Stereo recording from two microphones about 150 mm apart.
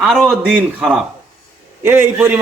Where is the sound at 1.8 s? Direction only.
15° right (ahead or behind).